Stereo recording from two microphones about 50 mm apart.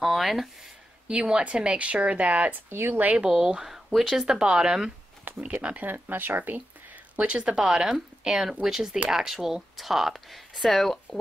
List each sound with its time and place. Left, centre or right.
0.0 s speech: centre
1.0 s a woman's voice: right
2.7 s speech: right
3.0 s speech: right
3.3 s speech: centre
4.4 s speech: centre
5.4 s a woman's voice: right
5.9 s speech: right
7.2 s a woman's voice: right
7.5 s speech: centre